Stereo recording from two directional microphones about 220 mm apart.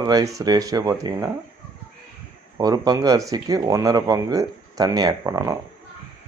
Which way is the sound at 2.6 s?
15° right (ahead or behind).